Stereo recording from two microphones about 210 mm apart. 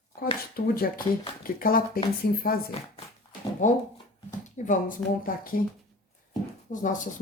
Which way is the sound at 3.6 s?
35° left (ahead or behind).